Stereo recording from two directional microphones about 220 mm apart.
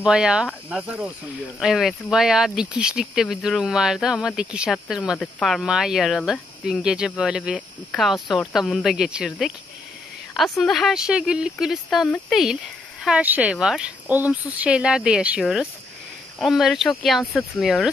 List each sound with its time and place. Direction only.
0.0 s speech: 5° right (ahead or behind)